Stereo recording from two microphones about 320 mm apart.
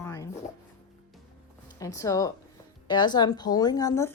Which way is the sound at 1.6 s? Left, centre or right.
Centre.